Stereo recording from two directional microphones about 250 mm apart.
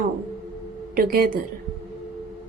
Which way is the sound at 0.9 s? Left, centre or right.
Right.